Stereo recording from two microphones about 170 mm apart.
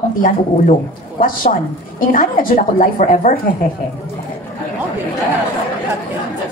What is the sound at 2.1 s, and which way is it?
A woman's voice, 55° left (ahead or behind).